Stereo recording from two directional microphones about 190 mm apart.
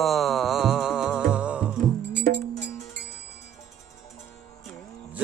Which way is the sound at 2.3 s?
45° right (ahead or behind).